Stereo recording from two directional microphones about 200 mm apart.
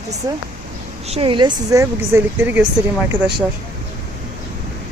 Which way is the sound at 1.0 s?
30° right (ahead or behind).